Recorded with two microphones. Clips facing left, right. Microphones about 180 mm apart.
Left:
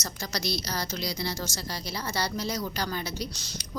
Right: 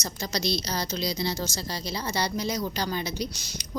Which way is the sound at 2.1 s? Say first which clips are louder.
Right 2 dB; 20° right (ahead or behind).